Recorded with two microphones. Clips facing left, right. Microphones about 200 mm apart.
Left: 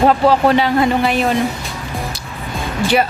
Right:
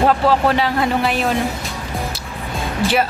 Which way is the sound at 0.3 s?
Centre (ahead or behind).